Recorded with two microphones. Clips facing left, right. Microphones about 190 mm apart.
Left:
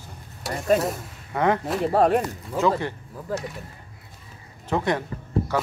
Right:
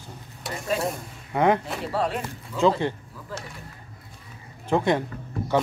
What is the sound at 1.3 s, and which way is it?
Speech, 15° right (ahead or behind).